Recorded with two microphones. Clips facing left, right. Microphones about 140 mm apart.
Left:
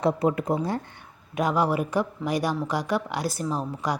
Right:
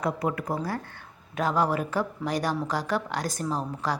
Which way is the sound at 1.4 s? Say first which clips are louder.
Left 2 dB; 10° left (ahead or behind).